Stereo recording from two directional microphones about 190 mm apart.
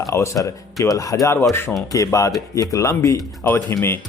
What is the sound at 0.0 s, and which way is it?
Speech, 15° left (ahead or behind).